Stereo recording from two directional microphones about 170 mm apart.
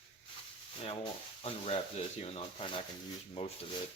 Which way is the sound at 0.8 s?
30° left (ahead or behind).